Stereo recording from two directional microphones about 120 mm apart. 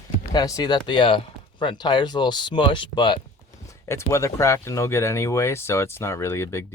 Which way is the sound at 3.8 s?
25° left (ahead or behind).